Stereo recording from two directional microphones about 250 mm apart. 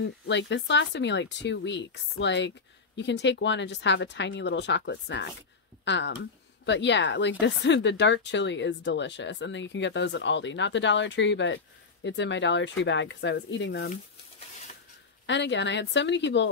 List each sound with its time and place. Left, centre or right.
0.0 s speech: left
15.2 s speech: left